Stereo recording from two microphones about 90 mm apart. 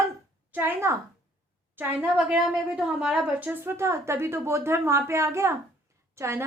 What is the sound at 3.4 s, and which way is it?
A woman's voice, 25° right (ahead or behind).